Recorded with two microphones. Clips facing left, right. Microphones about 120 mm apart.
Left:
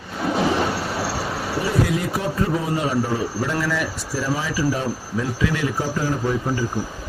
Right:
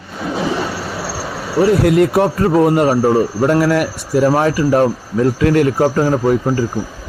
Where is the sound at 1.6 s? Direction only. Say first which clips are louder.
Right 12 dB; 70° right (ahead or behind); by 6.7 s 55° right (ahead or behind).